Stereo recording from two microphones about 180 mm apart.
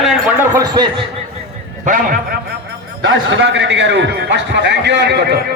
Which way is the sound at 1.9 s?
50° right (ahead or behind).